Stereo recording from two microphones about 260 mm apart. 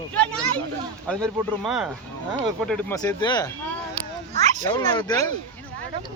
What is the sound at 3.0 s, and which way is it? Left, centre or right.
Speech, centre.